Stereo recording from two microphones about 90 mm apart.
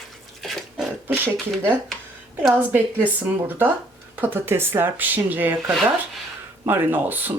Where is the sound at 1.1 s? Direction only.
20° right (ahead or behind).